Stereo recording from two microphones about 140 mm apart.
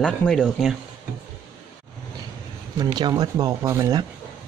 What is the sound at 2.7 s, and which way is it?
Speech, 30° right (ahead or behind).